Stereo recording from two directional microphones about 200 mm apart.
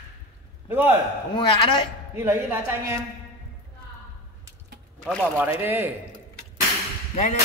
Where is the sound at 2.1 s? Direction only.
10° right (ahead or behind).